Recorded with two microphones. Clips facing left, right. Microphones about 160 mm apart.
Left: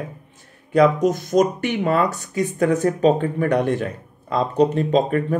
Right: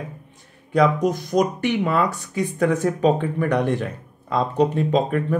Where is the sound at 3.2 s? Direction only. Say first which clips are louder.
Left 2 dB; 50° left (ahead or behind).